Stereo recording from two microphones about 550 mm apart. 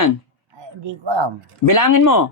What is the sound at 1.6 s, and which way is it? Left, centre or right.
Speech, left.